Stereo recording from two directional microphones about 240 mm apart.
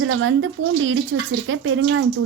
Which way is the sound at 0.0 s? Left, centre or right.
Right.